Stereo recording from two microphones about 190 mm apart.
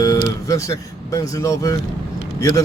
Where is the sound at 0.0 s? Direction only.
20° left (ahead or behind).